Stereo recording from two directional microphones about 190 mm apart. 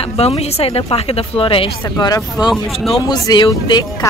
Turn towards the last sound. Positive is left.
turn(degrees=20)  # may be behind; listen again after turning